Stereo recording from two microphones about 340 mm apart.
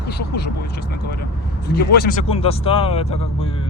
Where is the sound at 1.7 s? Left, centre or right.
Left.